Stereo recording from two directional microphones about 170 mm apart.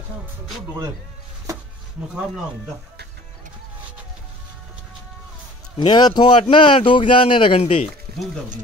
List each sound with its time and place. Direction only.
5.8 s speech: 25° left (ahead or behind)